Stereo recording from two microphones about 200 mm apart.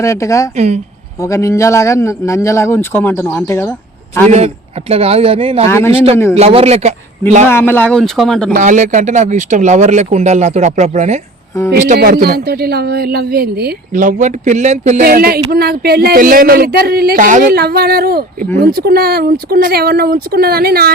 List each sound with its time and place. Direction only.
0.0 s a man's voice: 15° left (ahead or behind)
0.5 s speech: 35° right (ahead or behind)
1.2 s a man's voice: 15° left (ahead or behind)
4.3 s speech: 30° right (ahead or behind)
5.6 s a man's voice: 15° left (ahead or behind)
6.3 s speech: 30° right (ahead or behind)
7.5 s speech: 10° left (ahead or behind)
8.5 s speech: 40° right (ahead or behind)
11.7 s speech: 50° right (ahead or behind)
15.0 s speech: 50° right (ahead or behind)